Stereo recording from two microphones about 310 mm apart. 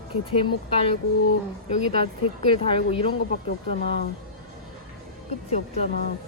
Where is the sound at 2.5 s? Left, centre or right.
Centre.